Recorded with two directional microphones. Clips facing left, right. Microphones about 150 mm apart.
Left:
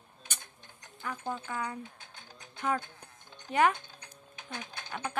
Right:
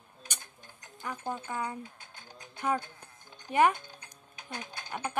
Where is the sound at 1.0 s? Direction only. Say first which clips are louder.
Even; 15° right (ahead or behind).